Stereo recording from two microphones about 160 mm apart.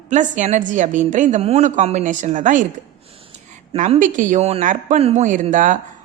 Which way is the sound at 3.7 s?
50° right (ahead or behind).